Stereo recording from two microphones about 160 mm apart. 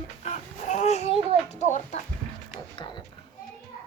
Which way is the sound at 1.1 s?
40° right (ahead or behind).